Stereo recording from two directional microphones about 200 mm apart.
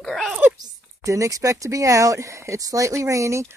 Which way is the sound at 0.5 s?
15° right (ahead or behind).